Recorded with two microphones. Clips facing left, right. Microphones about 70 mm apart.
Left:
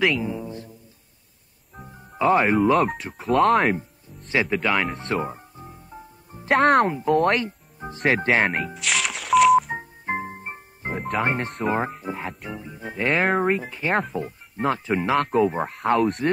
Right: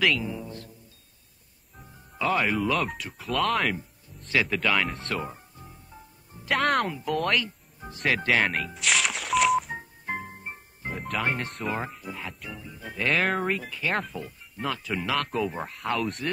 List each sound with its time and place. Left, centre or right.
0.0 s speech: centre
1.8 s music: left
3.0 s speech: left
4.3 s speech: centre
4.6 s speech: centre
5.1 s music: left
6.5 s speech: left
8.7 s music: centre
9.8 s music: left
11.6 s speech: left
15.7 s speech: left